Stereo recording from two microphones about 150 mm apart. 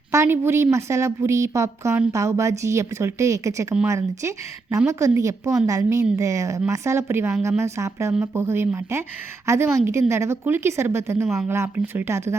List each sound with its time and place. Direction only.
0.1 s a woman's voice: 20° right (ahead or behind)